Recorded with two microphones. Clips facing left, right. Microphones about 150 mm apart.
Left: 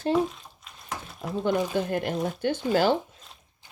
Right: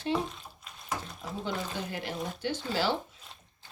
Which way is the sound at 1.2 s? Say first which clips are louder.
Left 14 dB; 55° left (ahead or behind).